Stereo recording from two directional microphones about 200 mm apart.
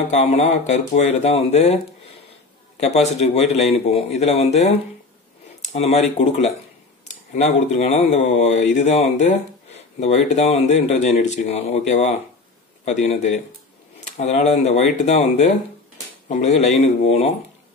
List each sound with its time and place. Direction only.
0.1 s speech: 35° left (ahead or behind)